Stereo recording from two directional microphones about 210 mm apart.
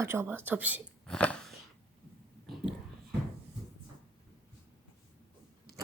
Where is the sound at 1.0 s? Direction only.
5° left (ahead or behind).